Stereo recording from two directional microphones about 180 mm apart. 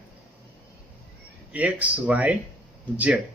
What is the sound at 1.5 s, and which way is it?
Speech, 5° right (ahead or behind).